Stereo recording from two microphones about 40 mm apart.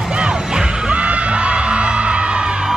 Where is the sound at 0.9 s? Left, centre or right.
Right.